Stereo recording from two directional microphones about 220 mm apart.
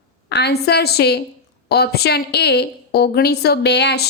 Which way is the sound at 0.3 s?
50° left (ahead or behind).